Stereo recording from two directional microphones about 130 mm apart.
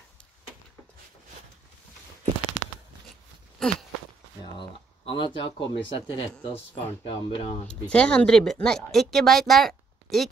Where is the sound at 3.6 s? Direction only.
5° left (ahead or behind).